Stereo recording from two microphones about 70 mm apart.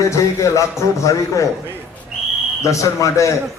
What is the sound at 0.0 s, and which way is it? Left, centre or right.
A man's voice, left.